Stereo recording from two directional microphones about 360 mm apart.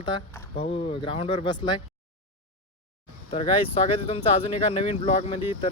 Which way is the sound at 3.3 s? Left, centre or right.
Centre.